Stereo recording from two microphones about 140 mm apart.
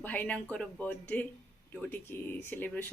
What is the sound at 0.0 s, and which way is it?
Speech, 10° left (ahead or behind).